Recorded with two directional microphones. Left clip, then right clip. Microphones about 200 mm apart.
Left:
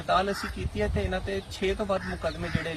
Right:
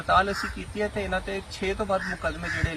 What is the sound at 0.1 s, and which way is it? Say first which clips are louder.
Speech: right 3 dB; centre (ahead or behind).